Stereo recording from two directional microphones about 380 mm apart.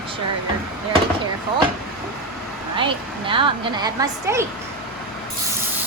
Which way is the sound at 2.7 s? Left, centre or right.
Centre.